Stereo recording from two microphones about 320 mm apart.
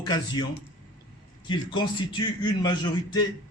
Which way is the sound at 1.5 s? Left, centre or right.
Centre.